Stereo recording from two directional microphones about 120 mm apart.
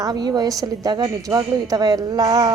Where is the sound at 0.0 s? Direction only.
35° right (ahead or behind).